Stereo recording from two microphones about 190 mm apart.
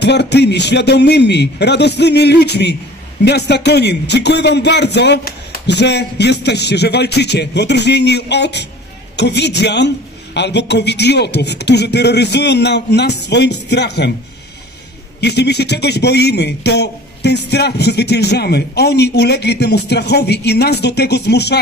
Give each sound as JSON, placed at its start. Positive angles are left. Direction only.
{"t": 0.0, "sound": "a man's voice", "side_deg": 65}
{"t": 15.1, "sound": "a man's voice", "side_deg": 60}